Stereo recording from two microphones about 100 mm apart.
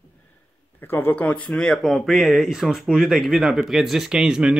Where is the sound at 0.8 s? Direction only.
20° left (ahead or behind); by 4.5 s 5° right (ahead or behind).